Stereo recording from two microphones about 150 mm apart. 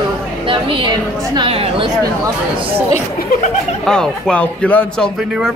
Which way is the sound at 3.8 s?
5° left (ahead or behind).